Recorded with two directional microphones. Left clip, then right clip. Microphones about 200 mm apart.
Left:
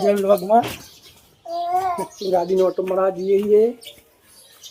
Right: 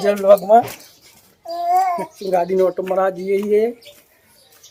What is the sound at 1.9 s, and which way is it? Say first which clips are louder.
A child's voice: right 2 dB; 10° right (ahead or behind).